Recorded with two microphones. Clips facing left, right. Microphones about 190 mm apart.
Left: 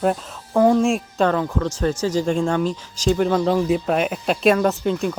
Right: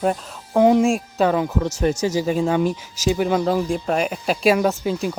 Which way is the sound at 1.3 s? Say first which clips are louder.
Right 1 dB; 15° right (ahead or behind).